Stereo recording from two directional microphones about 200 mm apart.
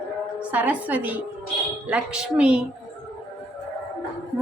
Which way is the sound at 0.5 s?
10° right (ahead or behind).